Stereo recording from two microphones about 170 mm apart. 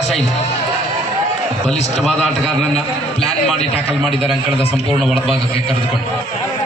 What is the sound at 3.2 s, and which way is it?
A man's voice, 35° left (ahead or behind).